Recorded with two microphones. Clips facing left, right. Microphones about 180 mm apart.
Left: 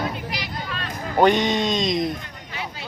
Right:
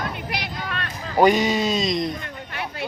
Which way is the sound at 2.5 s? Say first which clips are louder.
Right 3 dB; 60° right (ahead or behind).